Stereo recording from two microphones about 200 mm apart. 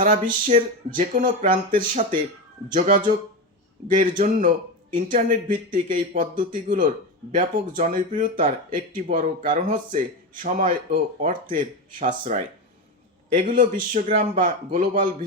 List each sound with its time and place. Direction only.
0.0 s speech: 40° right (ahead or behind)
4.1 s speech: 40° right (ahead or behind)